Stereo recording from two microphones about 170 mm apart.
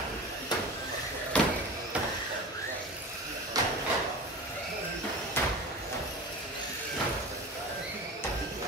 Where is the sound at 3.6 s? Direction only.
20° right (ahead or behind).